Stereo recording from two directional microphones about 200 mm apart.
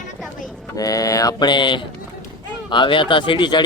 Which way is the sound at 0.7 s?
15° left (ahead or behind).